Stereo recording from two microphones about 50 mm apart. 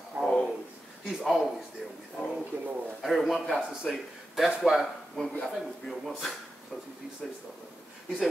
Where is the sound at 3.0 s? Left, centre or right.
Centre.